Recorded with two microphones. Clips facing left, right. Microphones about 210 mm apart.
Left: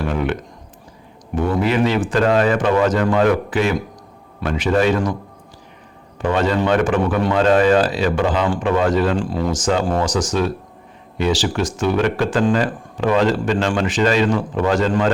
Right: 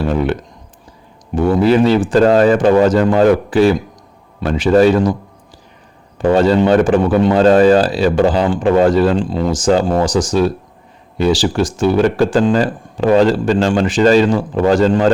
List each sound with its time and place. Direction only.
0.0 s a sound: 35° right (ahead or behind)
1.4 s speech: 35° right (ahead or behind)
6.1 s speech: 35° right (ahead or behind)
7.3 s speech: 35° right (ahead or behind)
9.1 s speech: 25° right (ahead or behind)